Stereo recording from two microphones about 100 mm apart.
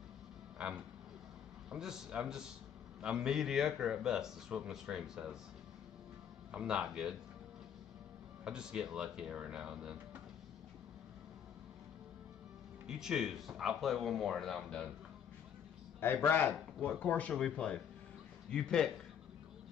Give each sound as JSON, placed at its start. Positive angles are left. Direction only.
{"t": 0.6, "sound": "a sound", "side_deg": -5}
{"t": 1.7, "sound": "a man's voice", "side_deg": -5}
{"t": 6.5, "sound": "speech", "side_deg": -10}
{"t": 8.5, "sound": "speech", "side_deg": -10}
{"t": 12.8, "sound": "a man's voice", "side_deg": -5}
{"t": 16.0, "sound": "a man's voice", "side_deg": 20}